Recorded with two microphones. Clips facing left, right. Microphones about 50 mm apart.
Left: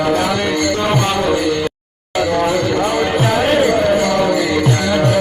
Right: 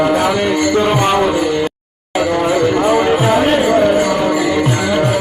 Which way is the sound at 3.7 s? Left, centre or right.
Centre.